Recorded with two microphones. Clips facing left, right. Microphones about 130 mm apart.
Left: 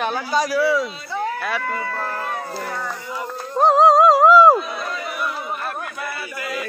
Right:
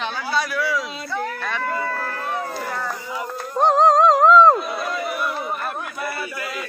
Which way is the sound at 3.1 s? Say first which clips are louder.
Left 2 dB; 5° right (ahead or behind).